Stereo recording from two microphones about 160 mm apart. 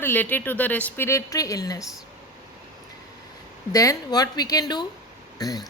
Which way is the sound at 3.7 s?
20° left (ahead or behind).